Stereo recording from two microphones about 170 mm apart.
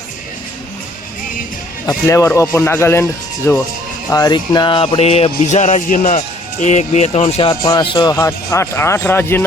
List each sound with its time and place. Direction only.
1.9 s speech: 20° left (ahead or behind); by 7.5 s 35° left (ahead or behind)
7.6 s speech: 25° left (ahead or behind)